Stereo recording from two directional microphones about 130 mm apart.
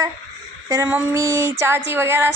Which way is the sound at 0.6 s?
25° right (ahead or behind).